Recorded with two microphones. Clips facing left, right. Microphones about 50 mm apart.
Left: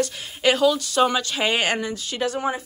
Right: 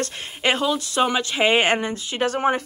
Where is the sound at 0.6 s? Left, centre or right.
Right.